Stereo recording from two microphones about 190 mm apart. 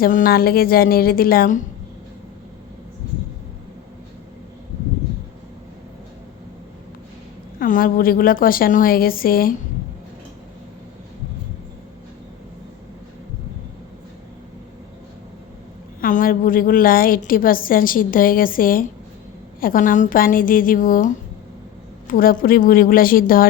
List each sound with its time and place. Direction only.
0.0 s a woman's voice: 50° left (ahead or behind)
7.6 s a woman's voice: 45° left (ahead or behind)
16.0 s a woman's voice: 45° left (ahead or behind)